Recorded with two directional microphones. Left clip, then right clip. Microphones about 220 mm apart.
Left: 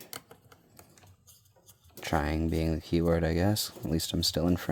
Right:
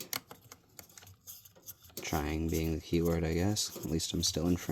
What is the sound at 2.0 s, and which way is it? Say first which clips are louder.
Speech: left 5 dB; 30° left (ahead or behind).